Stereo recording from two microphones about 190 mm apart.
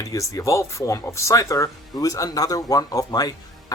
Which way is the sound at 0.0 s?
15° left (ahead or behind).